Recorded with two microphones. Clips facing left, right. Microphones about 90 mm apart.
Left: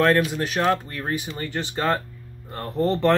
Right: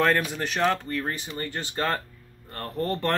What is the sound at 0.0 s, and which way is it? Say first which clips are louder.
Speech: left 4 dB; centre (ahead or behind).